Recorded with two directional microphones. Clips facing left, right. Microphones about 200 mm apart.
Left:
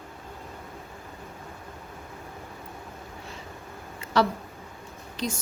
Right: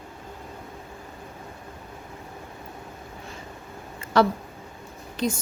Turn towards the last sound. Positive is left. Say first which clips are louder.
# right 5 dB
turn(degrees=-55)  # may be behind; listen again after turning